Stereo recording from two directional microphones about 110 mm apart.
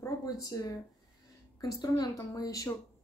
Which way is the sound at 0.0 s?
30° left (ahead or behind).